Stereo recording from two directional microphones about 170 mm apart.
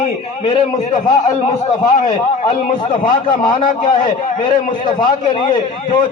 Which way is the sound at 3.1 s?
30° left (ahead or behind).